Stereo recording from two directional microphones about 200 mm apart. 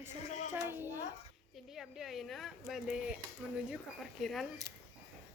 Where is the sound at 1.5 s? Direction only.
Centre (ahead or behind).